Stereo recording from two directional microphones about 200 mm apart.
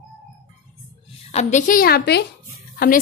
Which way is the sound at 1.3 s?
40° left (ahead or behind).